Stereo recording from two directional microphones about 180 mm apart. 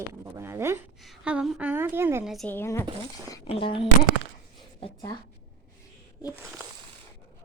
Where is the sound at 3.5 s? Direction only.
30° left (ahead or behind).